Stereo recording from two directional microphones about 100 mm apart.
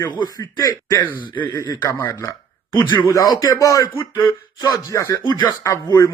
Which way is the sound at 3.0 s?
35° left (ahead or behind).